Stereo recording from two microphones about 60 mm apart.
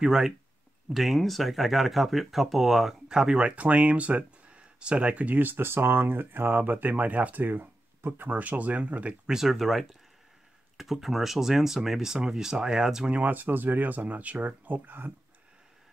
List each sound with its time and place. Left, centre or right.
0.0 s speech: centre
9.3 s speech: centre
13.1 s speech: right